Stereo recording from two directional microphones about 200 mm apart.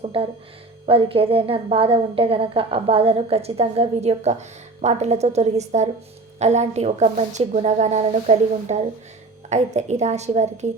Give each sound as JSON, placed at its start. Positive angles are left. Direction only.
{"t": 0.0, "sound": "music", "side_deg": -30}
{"t": 0.9, "sound": "a woman's voice", "side_deg": -30}